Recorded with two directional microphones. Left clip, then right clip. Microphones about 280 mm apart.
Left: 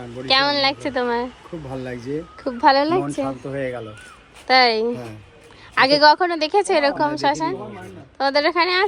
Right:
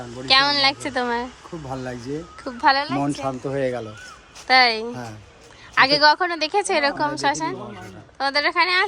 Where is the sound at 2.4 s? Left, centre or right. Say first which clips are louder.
Left 3 dB; centre.